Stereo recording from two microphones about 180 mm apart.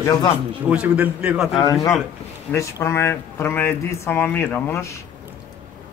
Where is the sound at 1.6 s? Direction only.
20° left (ahead or behind).